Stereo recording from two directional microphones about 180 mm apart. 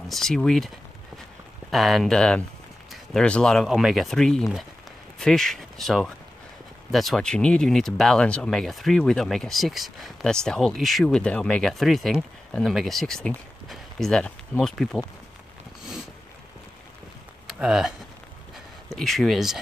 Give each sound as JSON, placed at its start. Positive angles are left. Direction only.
{"t": 0.1, "sound": "speech", "side_deg": 5}
{"t": 1.7, "sound": "speech", "side_deg": 0}
{"t": 17.5, "sound": "speech", "side_deg": -5}